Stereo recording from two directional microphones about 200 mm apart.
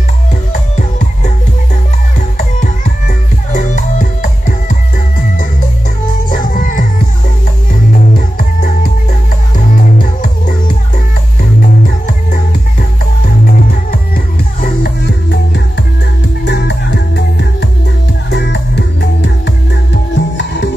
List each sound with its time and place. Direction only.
0.5 s music: 40° left (ahead or behind)
2.3 s music: 45° left (ahead or behind)
6.3 s music: 45° left (ahead or behind)
8.4 s music: 45° left (ahead or behind)
13.5 s music: 45° left (ahead or behind)